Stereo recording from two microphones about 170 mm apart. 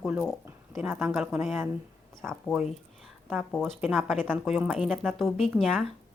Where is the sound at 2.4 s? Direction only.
Centre (ahead or behind).